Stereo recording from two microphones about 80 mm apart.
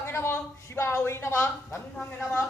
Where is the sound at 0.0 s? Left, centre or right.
Left.